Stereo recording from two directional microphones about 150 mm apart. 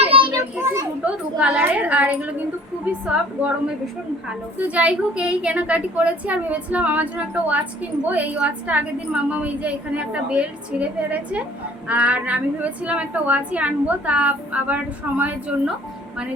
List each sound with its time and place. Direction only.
0.0 s children playing: 35° right (ahead or behind)
0.6 s children playing: 20° right (ahead or behind)
1.4 s a woman's voice: 10° right (ahead or behind)
4.3 s a woman's voice: 10° right (ahead or behind)